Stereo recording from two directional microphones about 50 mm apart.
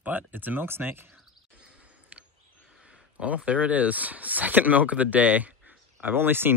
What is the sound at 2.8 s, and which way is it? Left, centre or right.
Speech, right.